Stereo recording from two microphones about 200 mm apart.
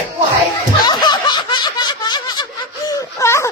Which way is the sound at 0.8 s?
20° left (ahead or behind).